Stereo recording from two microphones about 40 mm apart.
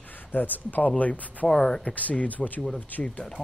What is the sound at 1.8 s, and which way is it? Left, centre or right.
Speech, left.